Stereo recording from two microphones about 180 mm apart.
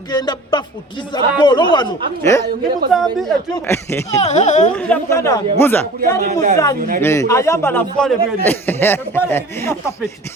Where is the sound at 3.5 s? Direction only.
15° left (ahead or behind).